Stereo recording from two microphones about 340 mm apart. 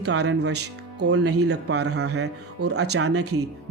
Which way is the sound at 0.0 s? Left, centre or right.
Right.